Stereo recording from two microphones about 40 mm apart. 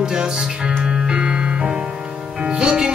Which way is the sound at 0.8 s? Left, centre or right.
Centre.